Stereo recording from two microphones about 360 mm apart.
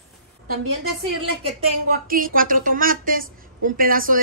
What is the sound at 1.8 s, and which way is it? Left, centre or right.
A woman's voice, right.